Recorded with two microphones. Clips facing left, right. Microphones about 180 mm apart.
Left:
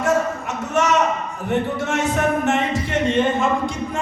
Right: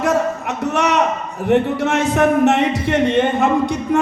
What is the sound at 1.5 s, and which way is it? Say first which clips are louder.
A man's voice: right 6 dB; 65° right (ahead or behind).